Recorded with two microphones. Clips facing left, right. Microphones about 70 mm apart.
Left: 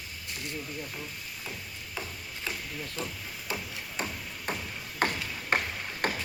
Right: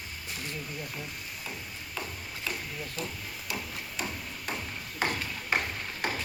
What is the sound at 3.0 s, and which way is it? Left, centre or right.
Speech, left.